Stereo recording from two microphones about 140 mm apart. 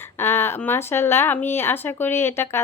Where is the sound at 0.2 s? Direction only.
15° left (ahead or behind).